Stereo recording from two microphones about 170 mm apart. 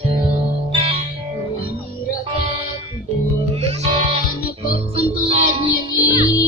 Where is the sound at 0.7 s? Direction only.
30° right (ahead or behind).